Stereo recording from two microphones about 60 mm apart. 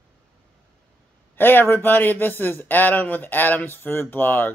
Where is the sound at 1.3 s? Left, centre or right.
Left.